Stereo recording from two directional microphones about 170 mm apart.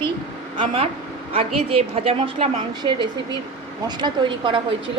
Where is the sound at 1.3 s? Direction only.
35° right (ahead or behind).